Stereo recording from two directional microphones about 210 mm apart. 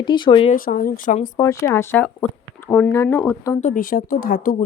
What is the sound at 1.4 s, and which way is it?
Speech, 15° left (ahead or behind).